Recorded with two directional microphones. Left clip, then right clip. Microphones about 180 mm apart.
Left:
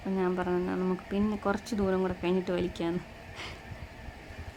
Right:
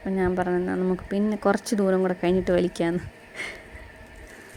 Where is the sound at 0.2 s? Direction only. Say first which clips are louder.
Right 6 dB; 25° right (ahead or behind).